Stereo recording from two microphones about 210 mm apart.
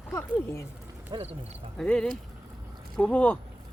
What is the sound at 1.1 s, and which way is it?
Speech, 30° right (ahead or behind).